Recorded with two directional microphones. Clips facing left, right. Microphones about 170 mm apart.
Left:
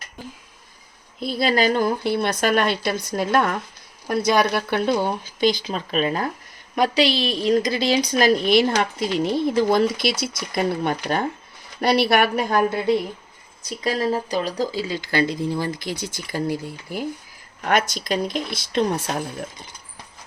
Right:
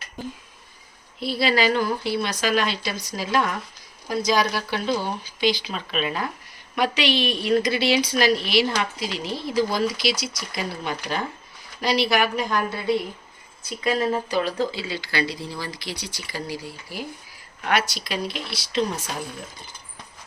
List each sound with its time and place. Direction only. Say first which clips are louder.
1.3 s a woman's voice: left 1 dB; 45° left (ahead or behind)
13.6 s a woman's voice: even; 35° left (ahead or behind); by 19.2 s 60° left (ahead or behind)